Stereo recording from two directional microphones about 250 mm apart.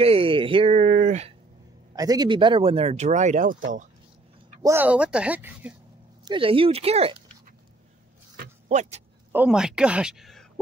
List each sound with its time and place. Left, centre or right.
0.0 s a sound: right
2.0 s speech: centre; by 3.6 s right
4.6 s speech: centre
6.2 s speech: right
8.6 s speech: right
9.3 s speech: centre